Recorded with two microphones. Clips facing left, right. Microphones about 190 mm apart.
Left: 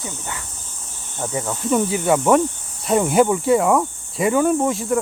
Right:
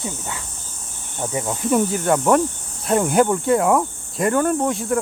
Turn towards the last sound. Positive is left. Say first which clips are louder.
# left 1 dB
turn(degrees=0)  # may be behind; listen again after turning